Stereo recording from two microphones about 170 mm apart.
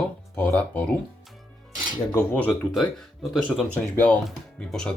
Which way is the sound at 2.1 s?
10° left (ahead or behind).